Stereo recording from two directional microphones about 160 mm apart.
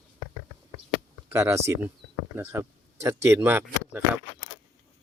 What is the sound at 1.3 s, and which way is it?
Speech, 15° right (ahead or behind).